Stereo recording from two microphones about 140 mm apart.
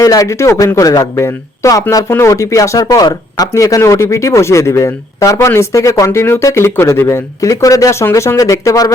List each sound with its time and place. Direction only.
0.0 s a man's voice: 25° left (ahead or behind)